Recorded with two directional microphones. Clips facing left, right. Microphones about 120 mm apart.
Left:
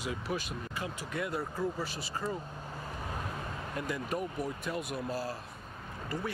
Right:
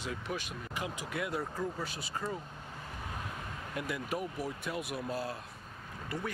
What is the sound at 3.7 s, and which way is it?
Speech, 5° right (ahead or behind).